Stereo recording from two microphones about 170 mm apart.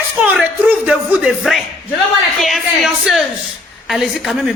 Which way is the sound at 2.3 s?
Centre (ahead or behind).